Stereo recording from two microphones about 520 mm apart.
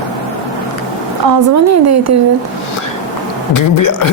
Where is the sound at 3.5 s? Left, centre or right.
Left.